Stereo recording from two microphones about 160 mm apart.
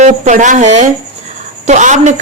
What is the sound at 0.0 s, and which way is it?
A man's voice, 50° right (ahead or behind).